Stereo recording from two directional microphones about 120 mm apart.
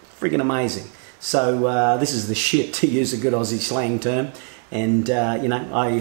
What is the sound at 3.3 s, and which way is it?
Speech, 10° right (ahead or behind).